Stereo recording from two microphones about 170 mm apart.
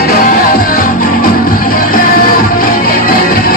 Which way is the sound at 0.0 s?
60° left (ahead or behind).